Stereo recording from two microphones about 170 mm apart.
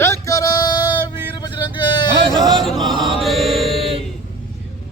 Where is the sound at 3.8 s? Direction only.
35° right (ahead or behind).